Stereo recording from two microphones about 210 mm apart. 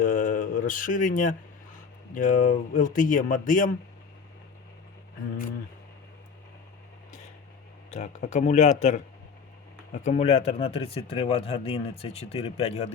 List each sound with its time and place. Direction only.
0.0 s mantra: 40° left (ahead or behind)
2.1 s speech: 40° left (ahead or behind)
7.9 s speech: 35° left (ahead or behind)